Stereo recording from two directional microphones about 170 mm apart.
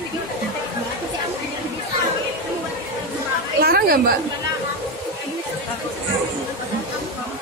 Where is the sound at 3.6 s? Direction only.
65° right (ahead or behind).